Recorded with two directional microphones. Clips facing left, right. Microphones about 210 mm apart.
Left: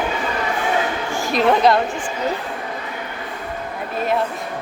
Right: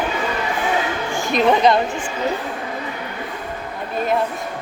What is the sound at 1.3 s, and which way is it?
Speech, centre (ahead or behind).